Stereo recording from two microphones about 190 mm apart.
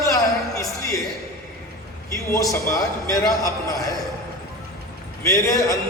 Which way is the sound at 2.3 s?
15° left (ahead or behind).